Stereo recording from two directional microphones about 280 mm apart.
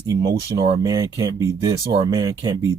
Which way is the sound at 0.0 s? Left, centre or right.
Centre.